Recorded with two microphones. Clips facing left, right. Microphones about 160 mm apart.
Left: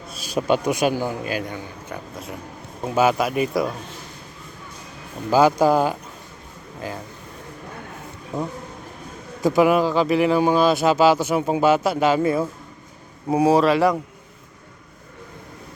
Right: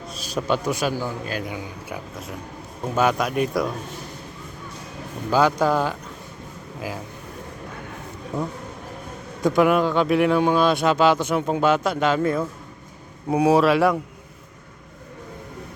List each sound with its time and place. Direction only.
0.1 s a man's voice: 10° left (ahead or behind)
1.4 s speech: 10° right (ahead or behind)
5.3 s speech: 10° left (ahead or behind)
6.8 s speech: 5° right (ahead or behind)
9.4 s speech: 5° left (ahead or behind)